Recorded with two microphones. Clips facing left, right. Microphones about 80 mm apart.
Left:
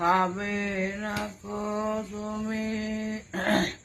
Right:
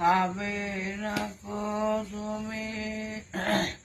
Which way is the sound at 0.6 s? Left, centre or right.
Left.